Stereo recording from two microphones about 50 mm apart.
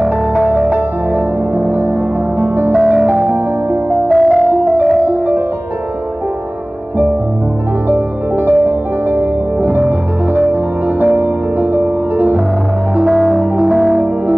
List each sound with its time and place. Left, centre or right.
0.7 s music: right
4.1 s music: centre
4.5 s music: right
7.9 s music: right
13.1 s music: centre